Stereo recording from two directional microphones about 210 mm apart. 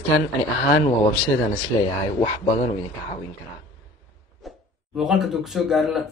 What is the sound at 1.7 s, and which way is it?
Speech, 20° left (ahead or behind).